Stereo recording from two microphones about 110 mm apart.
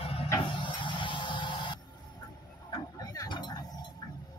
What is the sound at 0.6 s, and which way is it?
Music, 45° left (ahead or behind).